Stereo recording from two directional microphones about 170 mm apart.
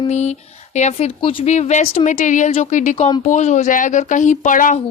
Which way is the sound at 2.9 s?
35° left (ahead or behind).